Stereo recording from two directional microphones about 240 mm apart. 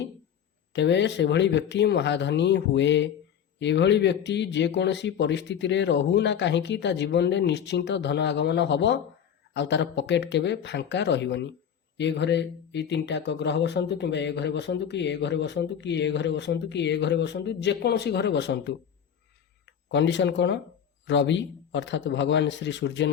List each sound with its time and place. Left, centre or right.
0.7 s speech: left